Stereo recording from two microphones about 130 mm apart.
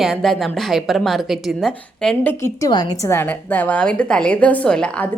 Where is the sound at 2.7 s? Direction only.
30° left (ahead or behind).